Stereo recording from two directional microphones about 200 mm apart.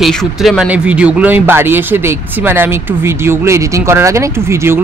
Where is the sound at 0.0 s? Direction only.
Centre (ahead or behind).